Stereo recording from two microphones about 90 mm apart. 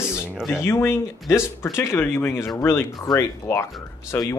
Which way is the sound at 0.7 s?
30° left (ahead or behind).